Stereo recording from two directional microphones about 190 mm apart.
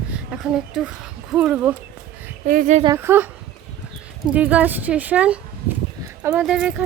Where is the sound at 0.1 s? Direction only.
5° right (ahead or behind).